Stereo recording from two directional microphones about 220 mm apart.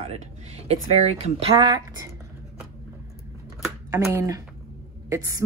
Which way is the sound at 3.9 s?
10° right (ahead or behind).